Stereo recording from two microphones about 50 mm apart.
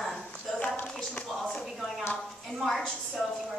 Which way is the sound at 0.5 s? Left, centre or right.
Left.